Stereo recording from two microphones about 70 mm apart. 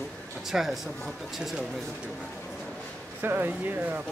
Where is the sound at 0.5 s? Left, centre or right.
Centre.